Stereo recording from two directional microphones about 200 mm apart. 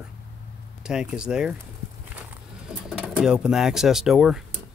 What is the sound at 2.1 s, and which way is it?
Pigeon, 5° right (ahead or behind).